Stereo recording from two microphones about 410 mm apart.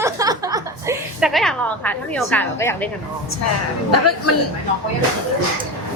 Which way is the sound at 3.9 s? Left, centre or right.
Left.